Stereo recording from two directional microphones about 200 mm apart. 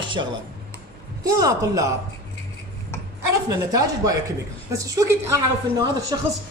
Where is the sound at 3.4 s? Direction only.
15° right (ahead or behind).